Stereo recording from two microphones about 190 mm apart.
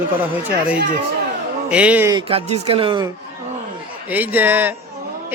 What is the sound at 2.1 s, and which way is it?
Speech, 25° right (ahead or behind).